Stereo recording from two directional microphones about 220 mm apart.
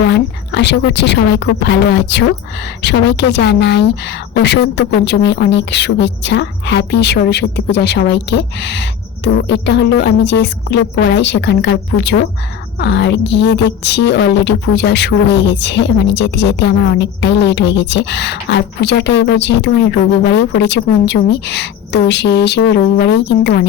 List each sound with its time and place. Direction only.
0.1 s a woman's voice: 50° left (ahead or behind)